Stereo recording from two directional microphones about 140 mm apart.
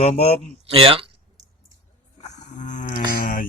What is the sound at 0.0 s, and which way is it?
Speech, 45° left (ahead or behind).